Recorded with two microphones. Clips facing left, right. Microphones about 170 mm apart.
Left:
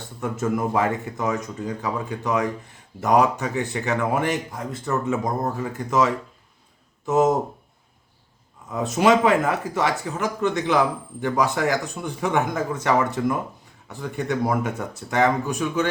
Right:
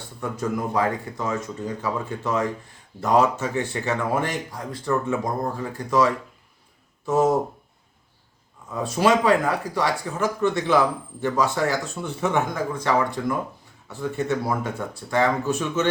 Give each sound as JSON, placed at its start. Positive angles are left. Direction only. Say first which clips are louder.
{"t": 0.2, "sound": "speech", "louder": "left 2 dB", "side_deg": 25}
{"t": 8.7, "sound": "speech", "louder": "left 2 dB", "side_deg": 20}